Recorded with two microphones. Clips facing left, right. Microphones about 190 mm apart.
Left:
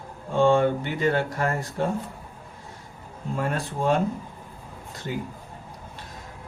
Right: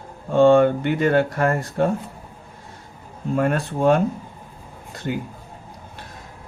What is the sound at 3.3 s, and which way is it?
Speech, 60° right (ahead or behind).